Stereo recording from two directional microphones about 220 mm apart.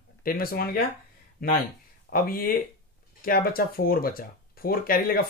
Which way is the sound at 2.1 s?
40° left (ahead or behind).